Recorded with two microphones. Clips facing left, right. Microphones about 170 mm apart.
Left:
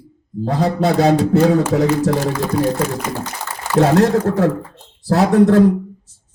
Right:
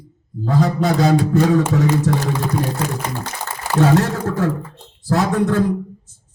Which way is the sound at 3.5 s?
40° right (ahead or behind).